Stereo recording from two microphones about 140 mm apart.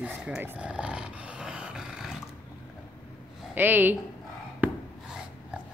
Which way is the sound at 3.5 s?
15° right (ahead or behind).